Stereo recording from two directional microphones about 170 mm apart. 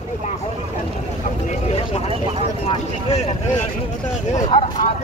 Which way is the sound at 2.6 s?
35° left (ahead or behind).